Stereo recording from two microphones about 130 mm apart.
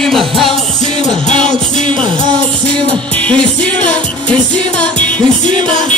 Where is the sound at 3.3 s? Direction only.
10° left (ahead or behind).